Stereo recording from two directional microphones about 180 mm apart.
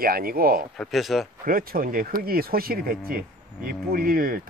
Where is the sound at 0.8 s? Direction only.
Centre (ahead or behind).